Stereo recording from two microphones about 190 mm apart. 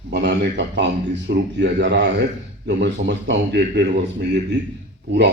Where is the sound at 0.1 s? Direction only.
65° right (ahead or behind).